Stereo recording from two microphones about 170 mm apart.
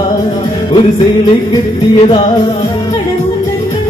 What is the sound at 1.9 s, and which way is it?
Music, 30° left (ahead or behind).